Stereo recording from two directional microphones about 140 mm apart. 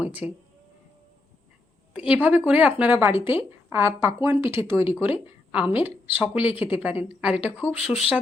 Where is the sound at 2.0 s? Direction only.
10° right (ahead or behind).